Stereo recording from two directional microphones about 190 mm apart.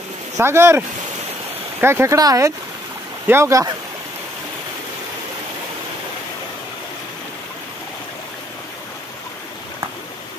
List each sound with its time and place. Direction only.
0.4 s speech: 15° right (ahead or behind)